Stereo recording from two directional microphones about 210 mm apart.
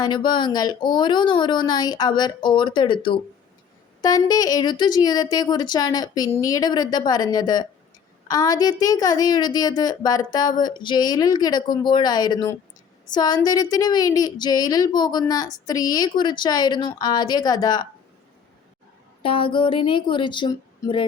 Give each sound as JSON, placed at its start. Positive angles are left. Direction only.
{"t": 0.0, "sound": "a woman's voice", "side_deg": 20}
{"t": 19.2, "sound": "a woman's voice", "side_deg": 25}